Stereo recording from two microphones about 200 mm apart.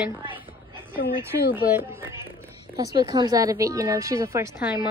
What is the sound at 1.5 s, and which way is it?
A woman's voice, 10° right (ahead or behind).